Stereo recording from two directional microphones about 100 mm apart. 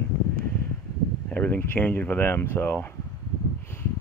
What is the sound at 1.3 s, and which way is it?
Speech, 15° left (ahead or behind).